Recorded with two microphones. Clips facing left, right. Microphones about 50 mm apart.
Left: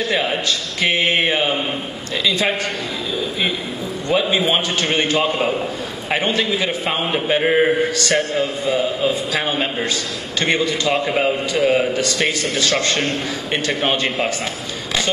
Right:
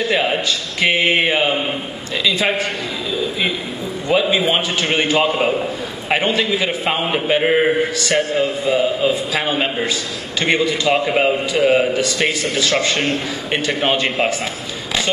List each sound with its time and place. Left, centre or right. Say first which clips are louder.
0.0 s a man's voice: right 2 dB; centre
4.1 s a man's voice: right 1 dB; centre
6.0 s a man's voice: right 2 dB; centre
6.3 s a man's voice: right 1 dB; centre
10.4 s a man's voice: right 2 dB; centre